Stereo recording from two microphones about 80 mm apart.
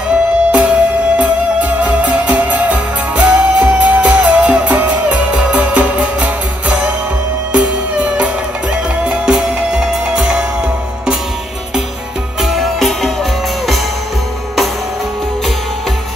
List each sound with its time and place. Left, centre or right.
0.5 s music: centre
12.4 s music: centre